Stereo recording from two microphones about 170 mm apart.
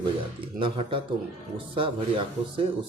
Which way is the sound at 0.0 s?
30° right (ahead or behind).